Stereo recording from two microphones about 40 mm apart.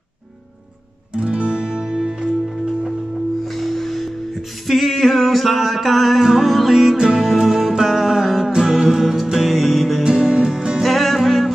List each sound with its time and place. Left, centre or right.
1.1 s music: right
3.4 s music: centre
7.0 s music: centre
10.0 s music: right
10.8 s music: centre